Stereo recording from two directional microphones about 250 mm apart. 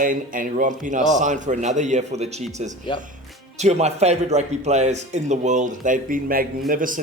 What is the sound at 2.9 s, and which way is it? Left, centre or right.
Speech, centre.